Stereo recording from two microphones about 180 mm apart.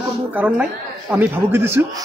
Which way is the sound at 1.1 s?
10° right (ahead or behind).